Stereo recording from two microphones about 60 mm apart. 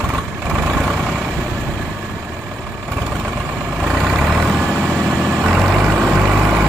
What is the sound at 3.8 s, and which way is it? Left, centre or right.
Vehicle, centre.